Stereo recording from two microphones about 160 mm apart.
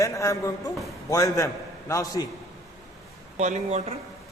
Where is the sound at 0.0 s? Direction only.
20° left (ahead or behind).